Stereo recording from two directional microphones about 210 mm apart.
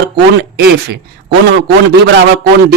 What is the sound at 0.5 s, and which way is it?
Speech, 50° right (ahead or behind).